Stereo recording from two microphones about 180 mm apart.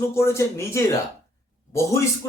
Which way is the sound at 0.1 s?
15° left (ahead or behind).